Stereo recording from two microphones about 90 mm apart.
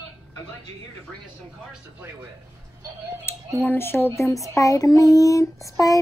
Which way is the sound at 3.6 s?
25° left (ahead or behind).